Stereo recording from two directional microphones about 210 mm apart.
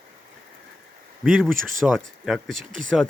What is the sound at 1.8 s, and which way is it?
Speech, centre (ahead or behind).